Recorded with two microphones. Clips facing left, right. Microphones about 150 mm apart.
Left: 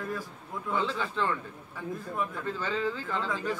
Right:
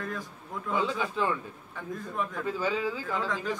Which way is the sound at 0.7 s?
10° right (ahead or behind).